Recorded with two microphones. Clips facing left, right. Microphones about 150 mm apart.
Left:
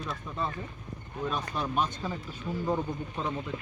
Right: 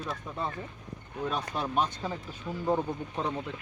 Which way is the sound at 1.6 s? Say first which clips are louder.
Right 1 dB; 25° right (ahead or behind).